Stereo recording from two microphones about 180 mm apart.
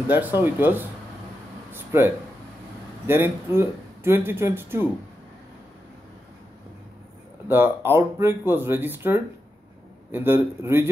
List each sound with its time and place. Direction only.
0.4 s speech: 10° right (ahead or behind)
1.7 s a sound: 10° right (ahead or behind)
3.1 s speech: 15° right (ahead or behind)
7.4 s speech: 10° right (ahead or behind)